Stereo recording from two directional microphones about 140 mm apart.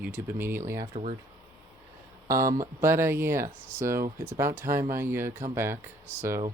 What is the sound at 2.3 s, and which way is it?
Speech, 20° right (ahead or behind).